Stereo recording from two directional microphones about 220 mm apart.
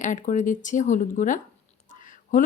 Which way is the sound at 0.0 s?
35° left (ahead or behind).